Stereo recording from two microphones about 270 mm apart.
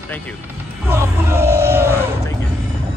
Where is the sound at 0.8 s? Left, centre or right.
Centre.